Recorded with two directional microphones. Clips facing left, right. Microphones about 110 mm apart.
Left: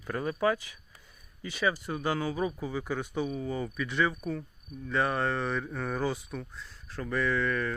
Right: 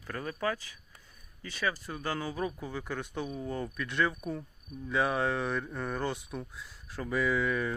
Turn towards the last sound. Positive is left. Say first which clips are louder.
# even
turn(degrees=-10)  # may be behind; listen again after turning